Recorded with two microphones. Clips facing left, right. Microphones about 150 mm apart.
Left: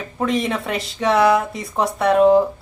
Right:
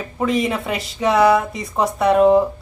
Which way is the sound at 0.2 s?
Centre (ahead or behind).